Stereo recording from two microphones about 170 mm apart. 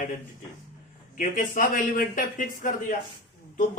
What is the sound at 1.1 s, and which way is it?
Speech, 55° left (ahead or behind).